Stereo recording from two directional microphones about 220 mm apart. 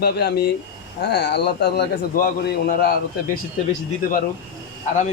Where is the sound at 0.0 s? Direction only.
45° left (ahead or behind).